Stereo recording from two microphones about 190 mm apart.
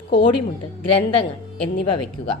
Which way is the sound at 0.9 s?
30° left (ahead or behind).